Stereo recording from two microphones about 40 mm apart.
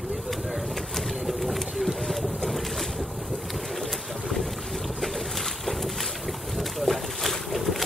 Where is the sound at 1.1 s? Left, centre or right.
Centre.